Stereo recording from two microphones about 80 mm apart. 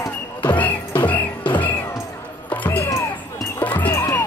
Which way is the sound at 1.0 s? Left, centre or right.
Centre.